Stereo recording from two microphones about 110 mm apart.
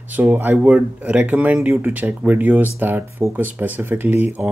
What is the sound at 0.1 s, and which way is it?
Speech, 15° right (ahead or behind).